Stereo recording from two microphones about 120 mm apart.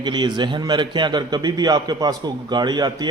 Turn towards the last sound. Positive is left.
turn(degrees=-35)  # may be behind; listen again after turning